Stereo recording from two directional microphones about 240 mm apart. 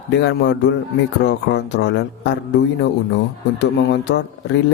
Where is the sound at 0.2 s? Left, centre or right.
Left.